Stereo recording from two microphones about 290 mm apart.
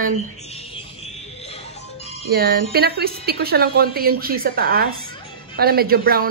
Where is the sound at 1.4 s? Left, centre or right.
Left.